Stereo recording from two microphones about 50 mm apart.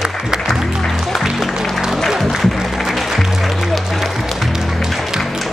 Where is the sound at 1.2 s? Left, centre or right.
Centre.